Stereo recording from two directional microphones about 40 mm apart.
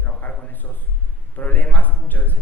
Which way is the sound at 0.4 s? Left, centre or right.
Left.